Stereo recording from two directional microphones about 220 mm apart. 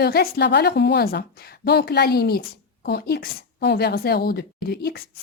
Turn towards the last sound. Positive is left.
turn(degrees=45)  # may be behind; listen again after turning